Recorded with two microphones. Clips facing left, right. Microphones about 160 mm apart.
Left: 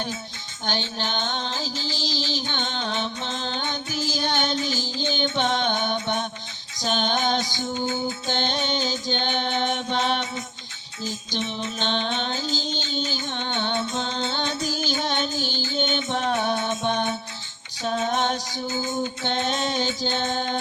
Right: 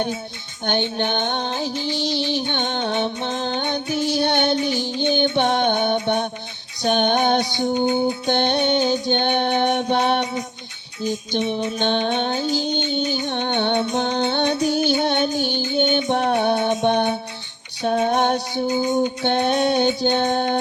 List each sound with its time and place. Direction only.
0.6 s music: 60° right (ahead or behind)
7.7 s music: 20° right (ahead or behind)
8.3 s music: 60° right (ahead or behind)
18.7 s music: 15° right (ahead or behind)
19.2 s music: 60° right (ahead or behind)
20.0 s mantra: 60° right (ahead or behind)